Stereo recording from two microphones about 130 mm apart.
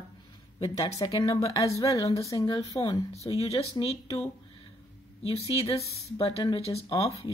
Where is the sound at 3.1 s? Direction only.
55° left (ahead or behind).